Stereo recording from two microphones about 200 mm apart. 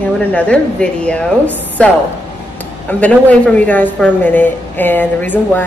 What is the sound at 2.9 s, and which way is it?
A woman's voice, 5° left (ahead or behind).